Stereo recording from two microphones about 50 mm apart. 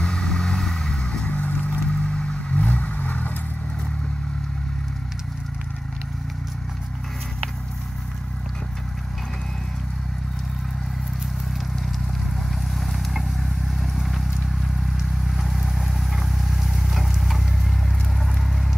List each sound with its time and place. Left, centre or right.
0.0 s vehicle: centre
1.2 s vehicle: left
2.6 s vehicle: left
12.8 s vehicle: centre